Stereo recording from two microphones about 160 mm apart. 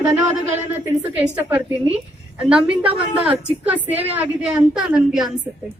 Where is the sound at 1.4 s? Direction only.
10° right (ahead or behind).